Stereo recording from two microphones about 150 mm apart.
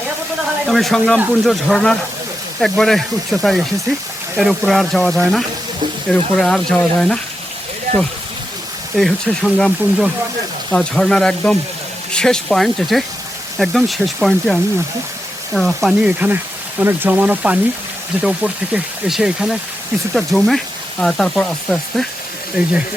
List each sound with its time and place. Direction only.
0.6 s speech: centre (ahead or behind)
9.0 s speech: 5° left (ahead or behind)